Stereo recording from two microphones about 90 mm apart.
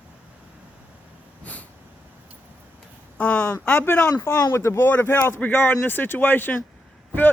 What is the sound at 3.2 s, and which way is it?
Speech, 15° left (ahead or behind).